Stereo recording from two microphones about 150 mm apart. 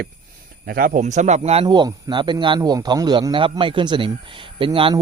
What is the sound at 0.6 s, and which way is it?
A man's voice, 80° right.